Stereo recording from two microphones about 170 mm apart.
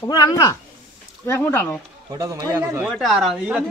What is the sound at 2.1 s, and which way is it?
Speech, 20° right (ahead or behind).